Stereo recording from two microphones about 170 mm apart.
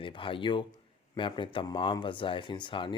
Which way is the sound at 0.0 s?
30° left (ahead or behind).